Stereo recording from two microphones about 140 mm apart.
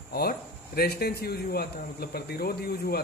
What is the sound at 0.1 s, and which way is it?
Speech, 90° left.